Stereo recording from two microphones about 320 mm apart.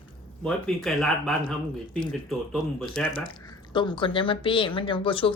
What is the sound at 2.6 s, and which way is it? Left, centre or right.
Speech, centre.